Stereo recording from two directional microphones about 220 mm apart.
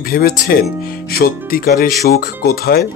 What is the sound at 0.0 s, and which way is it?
Speech, 45° left (ahead or behind).